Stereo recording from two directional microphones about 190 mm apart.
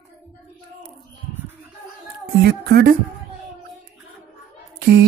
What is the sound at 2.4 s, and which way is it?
Speech, 50° right (ahead or behind).